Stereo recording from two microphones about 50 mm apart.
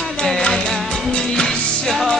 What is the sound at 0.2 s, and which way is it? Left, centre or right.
Music, centre.